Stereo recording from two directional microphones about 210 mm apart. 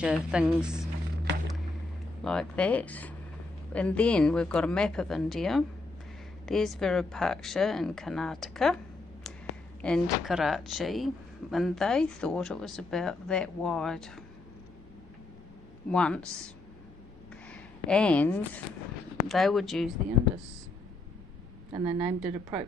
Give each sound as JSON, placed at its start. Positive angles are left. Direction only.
{"t": 0.0, "sound": "speech", "side_deg": -5}
{"t": 2.2, "sound": "speech", "side_deg": 5}
{"t": 15.9, "sound": "speech", "side_deg": 5}
{"t": 17.5, "sound": "speech", "side_deg": 5}
{"t": 21.7, "sound": "speech", "side_deg": -15}